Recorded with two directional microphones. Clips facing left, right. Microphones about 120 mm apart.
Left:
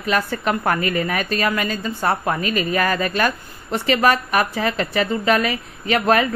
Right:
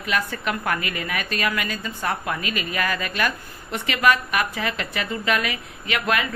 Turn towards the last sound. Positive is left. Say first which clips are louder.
# left 7 dB
turn(degrees=35)  # may be behind; listen again after turning